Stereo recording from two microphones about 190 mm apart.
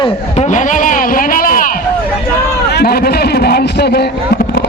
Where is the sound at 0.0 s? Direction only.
35° left (ahead or behind).